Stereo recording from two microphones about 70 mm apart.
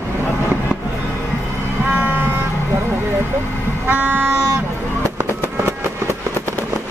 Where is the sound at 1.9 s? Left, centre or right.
Right.